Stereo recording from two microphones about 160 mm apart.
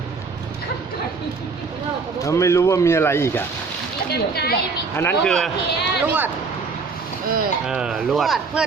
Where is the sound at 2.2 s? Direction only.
20° left (ahead or behind).